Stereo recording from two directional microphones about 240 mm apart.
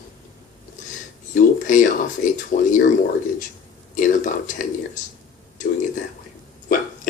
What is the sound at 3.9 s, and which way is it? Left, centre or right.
Speech, left.